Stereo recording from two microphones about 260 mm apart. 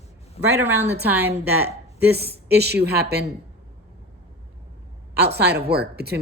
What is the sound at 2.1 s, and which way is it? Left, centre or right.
A woman's voice, right.